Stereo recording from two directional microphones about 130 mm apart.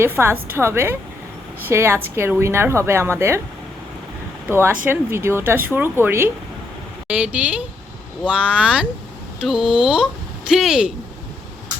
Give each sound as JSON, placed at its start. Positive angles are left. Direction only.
{"t": 0.0, "sound": "a woman's voice", "side_deg": -20}
{"t": 4.4, "sound": "speech", "side_deg": -15}